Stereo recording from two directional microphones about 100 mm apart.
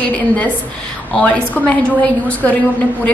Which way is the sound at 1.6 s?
15° left (ahead or behind).